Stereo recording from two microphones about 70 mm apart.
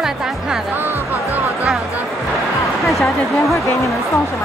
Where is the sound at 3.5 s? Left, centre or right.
Left.